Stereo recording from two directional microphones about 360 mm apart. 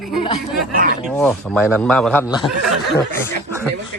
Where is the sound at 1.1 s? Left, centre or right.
Centre.